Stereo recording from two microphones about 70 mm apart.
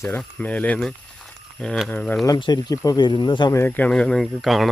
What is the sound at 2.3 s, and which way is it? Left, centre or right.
Speech, left.